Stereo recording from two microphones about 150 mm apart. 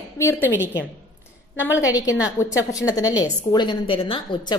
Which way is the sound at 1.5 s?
10° right (ahead or behind).